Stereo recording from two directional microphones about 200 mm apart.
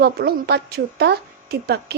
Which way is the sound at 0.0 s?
55° right (ahead or behind).